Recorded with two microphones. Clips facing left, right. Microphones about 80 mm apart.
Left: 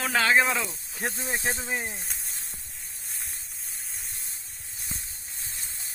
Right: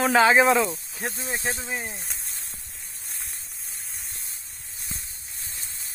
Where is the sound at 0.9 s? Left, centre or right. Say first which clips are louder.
Even; left.